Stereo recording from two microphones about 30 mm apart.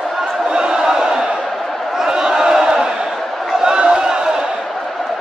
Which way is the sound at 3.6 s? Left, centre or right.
Right.